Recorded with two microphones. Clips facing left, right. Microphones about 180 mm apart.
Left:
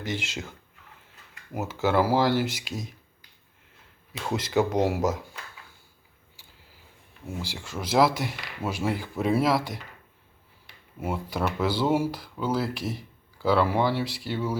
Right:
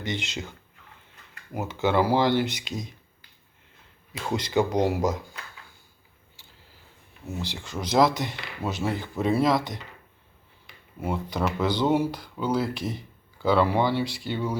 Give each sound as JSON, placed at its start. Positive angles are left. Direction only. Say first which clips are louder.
{"t": 0.0, "sound": "speech", "louder": "right 1 dB", "side_deg": 5}
{"t": 1.5, "sound": "speech", "louder": "even", "side_deg": 5}
{"t": 4.3, "sound": "speech", "louder": "even", "side_deg": 5}
{"t": 7.3, "sound": "speech", "louder": "right 1 dB", "side_deg": 10}
{"t": 11.0, "sound": "speech", "louder": "right 1 dB", "side_deg": 5}